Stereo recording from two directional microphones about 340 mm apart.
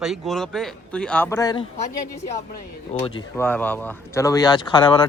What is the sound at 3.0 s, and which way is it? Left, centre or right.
Speech, centre.